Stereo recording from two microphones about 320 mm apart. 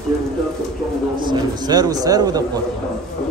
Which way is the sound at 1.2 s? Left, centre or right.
Centre.